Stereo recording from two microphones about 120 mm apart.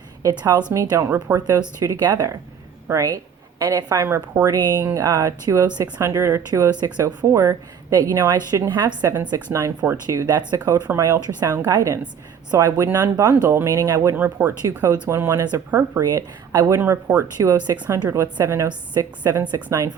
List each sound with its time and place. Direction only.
0.2 s a woman's voice: 30° right (ahead or behind)
4.5 s a woman's voice: 35° right (ahead or behind)
14.2 s a woman's voice: 15° right (ahead or behind); by 19.6 s 35° right (ahead or behind)